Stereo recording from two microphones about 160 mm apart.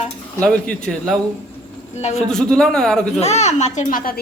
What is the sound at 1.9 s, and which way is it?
Speech, 45° left (ahead or behind).